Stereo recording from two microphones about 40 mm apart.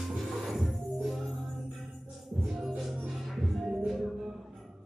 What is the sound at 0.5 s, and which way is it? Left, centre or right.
Music, centre.